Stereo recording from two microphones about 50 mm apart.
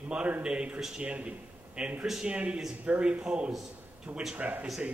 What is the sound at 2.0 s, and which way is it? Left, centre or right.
Speech, centre.